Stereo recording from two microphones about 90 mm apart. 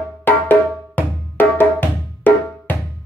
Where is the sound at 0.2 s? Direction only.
20° left (ahead or behind).